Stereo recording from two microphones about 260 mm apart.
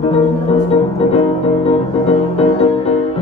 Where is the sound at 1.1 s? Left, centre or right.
Left.